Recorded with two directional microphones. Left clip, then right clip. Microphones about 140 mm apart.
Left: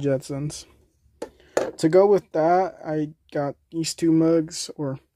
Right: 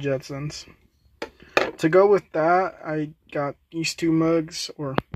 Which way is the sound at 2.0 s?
20° left (ahead or behind).